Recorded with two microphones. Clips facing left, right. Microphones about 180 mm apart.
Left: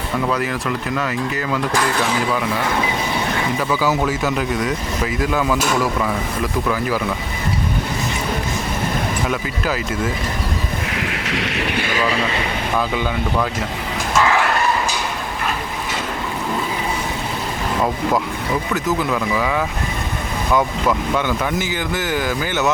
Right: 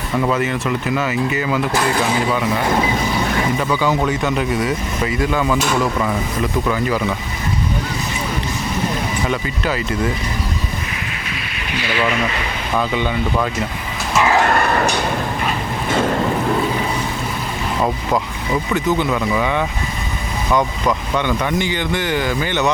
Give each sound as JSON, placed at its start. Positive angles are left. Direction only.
{"t": 0.3, "sound": "speech", "side_deg": 0}
{"t": 3.6, "sound": "speech", "side_deg": 5}
{"t": 9.2, "sound": "speech", "side_deg": 5}
{"t": 10.9, "sound": "a sound", "side_deg": 75}
{"t": 12.9, "sound": "speech", "side_deg": 0}
{"t": 14.6, "sound": "a sound", "side_deg": -60}
{"t": 18.7, "sound": "speech", "side_deg": 0}